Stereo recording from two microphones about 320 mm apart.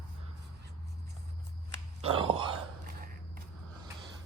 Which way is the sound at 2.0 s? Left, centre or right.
Centre.